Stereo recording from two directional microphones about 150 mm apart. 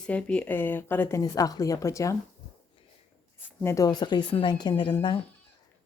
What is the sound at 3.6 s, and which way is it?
Speech, 20° left (ahead or behind).